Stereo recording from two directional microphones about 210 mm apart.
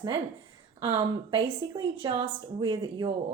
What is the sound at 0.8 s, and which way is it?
A woman's voice, 20° right (ahead or behind).